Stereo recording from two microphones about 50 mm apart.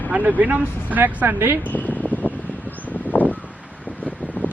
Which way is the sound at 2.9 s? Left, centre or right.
Left.